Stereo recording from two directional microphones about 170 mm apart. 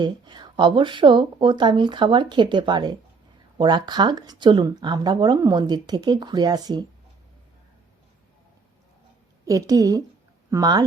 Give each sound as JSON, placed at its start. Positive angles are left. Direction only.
{"t": 0.0, "sound": "speech", "side_deg": -25}
{"t": 9.5, "sound": "speech", "side_deg": -20}